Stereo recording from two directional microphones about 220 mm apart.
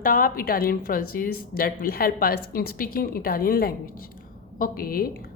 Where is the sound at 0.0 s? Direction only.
40° left (ahead or behind).